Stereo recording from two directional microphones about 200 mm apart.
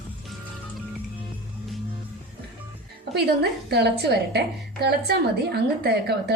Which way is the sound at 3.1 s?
55° right (ahead or behind).